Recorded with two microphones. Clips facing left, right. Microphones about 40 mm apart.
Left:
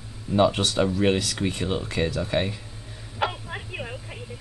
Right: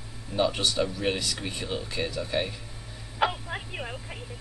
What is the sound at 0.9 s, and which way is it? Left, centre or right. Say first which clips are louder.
Speech: left 7 dB; left.